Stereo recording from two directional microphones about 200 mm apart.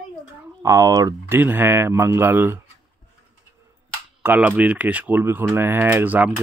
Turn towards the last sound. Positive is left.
turn(degrees=-10)  # may be behind; listen again after turning